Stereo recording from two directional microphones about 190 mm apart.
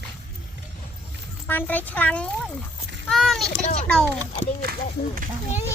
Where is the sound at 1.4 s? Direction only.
10° left (ahead or behind).